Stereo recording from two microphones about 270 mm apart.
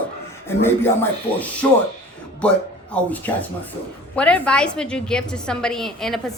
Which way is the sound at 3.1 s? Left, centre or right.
Centre.